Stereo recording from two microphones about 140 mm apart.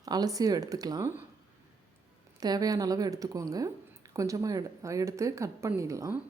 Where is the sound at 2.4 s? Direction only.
25° right (ahead or behind).